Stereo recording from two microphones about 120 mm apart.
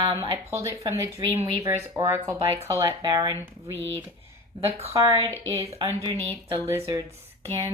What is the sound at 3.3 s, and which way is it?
Speech, 20° right (ahead or behind).